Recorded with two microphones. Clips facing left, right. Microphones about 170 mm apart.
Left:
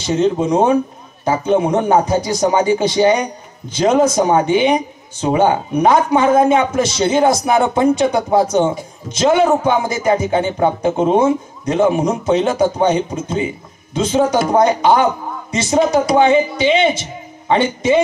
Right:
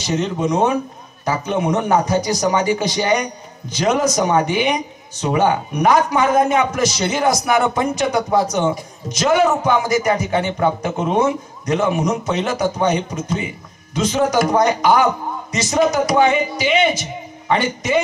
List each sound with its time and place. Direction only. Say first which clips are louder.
0.0 s a man's voice: left 5 dB; 30° left (ahead or behind)